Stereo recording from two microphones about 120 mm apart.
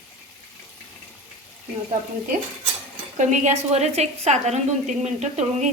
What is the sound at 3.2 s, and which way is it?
A woman's voice, 90° right.